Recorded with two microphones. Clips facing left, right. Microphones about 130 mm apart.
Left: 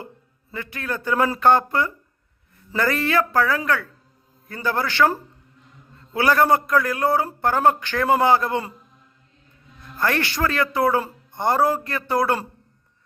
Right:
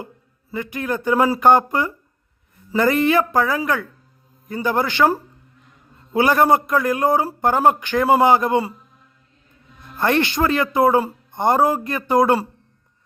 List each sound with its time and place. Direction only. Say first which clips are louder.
0.5 s a man's voice: right 5 dB; 15° right (ahead or behind)
10.0 s a man's voice: right 4 dB; 20° right (ahead or behind)